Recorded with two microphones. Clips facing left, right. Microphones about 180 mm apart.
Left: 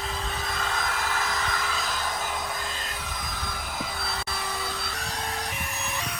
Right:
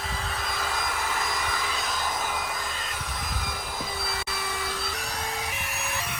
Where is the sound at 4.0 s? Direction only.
Centre (ahead or behind).